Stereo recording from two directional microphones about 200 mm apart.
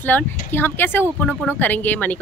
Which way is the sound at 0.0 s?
10° left (ahead or behind).